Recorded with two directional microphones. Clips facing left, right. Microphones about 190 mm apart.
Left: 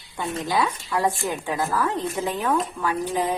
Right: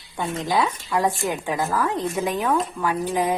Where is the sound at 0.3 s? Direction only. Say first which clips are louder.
Right 1 dB; 20° right (ahead or behind).